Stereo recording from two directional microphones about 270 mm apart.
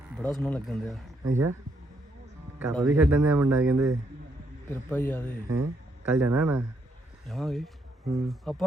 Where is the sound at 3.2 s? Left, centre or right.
Right.